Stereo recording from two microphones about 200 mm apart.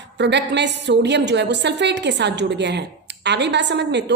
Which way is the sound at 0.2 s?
60° right (ahead or behind).